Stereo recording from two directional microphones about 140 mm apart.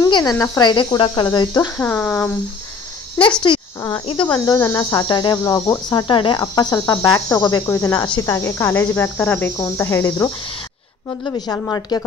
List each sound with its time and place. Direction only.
0.0 s speech: 25° left (ahead or behind)
1.8 s speech: 10° left (ahead or behind)
3.2 s speech: 35° left (ahead or behind); by 10.3 s 15° left (ahead or behind)
11.2 s speech: 30° left (ahead or behind)